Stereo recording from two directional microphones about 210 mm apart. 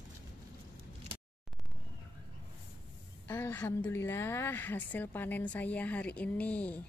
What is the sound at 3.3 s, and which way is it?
A woman's voice, 10° left (ahead or behind).